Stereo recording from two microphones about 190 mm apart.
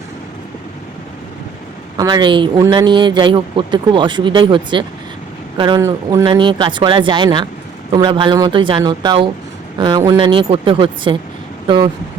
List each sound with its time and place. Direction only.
2.0 s speech: 20° right (ahead or behind)
6.2 s speech: 25° right (ahead or behind)